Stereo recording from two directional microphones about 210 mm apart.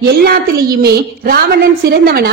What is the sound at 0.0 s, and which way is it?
A woman's voice, 50° right (ahead or behind).